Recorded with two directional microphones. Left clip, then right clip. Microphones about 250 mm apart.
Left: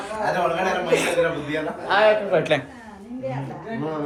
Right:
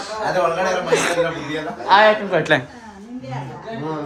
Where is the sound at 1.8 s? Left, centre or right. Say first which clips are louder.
Right 5 dB; right.